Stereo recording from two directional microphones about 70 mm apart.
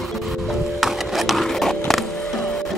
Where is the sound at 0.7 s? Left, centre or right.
Centre.